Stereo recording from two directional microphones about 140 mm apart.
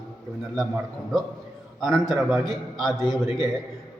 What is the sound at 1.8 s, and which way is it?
A man's voice, centre (ahead or behind).